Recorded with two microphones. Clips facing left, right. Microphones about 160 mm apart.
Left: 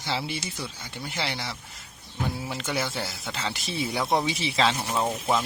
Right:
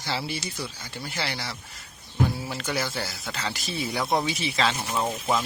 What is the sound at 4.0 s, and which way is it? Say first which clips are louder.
Speech: even; 5° left (ahead or behind).